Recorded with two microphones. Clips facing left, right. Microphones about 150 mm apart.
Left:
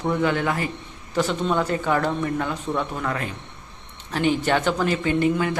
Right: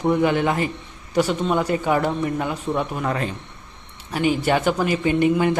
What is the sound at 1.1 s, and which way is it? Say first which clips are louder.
A woman's voice: right 2 dB; 10° right (ahead or behind).